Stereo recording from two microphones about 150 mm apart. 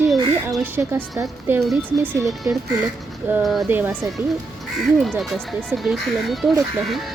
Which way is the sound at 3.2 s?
10° right (ahead or behind).